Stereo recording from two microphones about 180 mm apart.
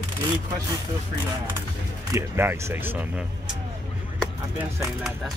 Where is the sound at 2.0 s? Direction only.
15° right (ahead or behind).